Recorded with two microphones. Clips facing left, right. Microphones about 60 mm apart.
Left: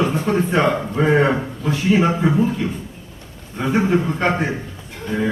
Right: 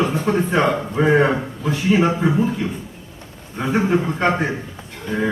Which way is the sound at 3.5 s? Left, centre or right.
Centre.